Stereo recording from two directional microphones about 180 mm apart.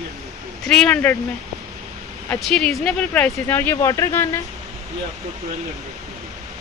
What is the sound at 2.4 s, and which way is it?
Speech, centre (ahead or behind).